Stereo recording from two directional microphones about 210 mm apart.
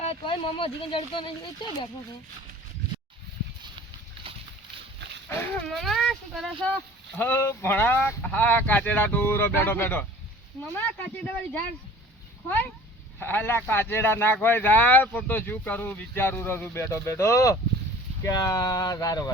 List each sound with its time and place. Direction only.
0.0 s speech: 25° left (ahead or behind)
5.7 s speech: centre (ahead or behind)
13.1 s speech: 10° left (ahead or behind)